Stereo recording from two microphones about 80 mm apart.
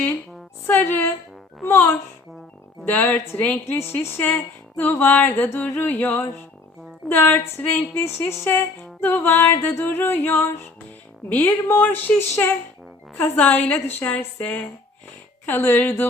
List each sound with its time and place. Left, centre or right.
0.7 s speech: left
13.1 s speech: left